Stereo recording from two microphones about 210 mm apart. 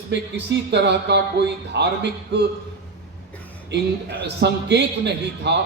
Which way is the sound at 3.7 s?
55° right (ahead or behind).